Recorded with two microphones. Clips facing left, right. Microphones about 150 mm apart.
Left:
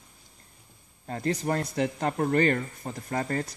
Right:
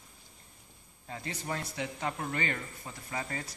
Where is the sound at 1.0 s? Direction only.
50° left (ahead or behind).